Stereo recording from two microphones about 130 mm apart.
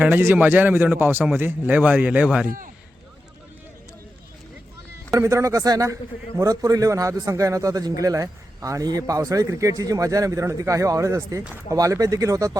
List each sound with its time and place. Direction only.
0.0 s a man's voice: 15° right (ahead or behind)
5.1 s a man's voice: 25° right (ahead or behind)